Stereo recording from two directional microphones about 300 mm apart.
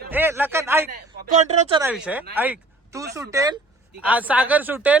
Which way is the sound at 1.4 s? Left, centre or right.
Right.